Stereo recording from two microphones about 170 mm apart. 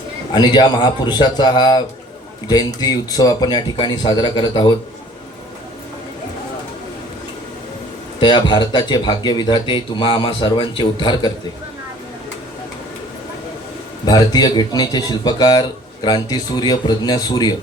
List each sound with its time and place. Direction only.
0.3 s speech: 25° left (ahead or behind)
8.2 s speech: 25° left (ahead or behind)
14.0 s speech: 25° left (ahead or behind)